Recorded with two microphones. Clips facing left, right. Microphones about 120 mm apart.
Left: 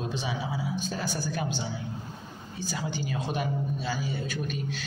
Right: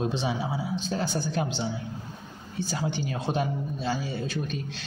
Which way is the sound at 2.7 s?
25° right (ahead or behind).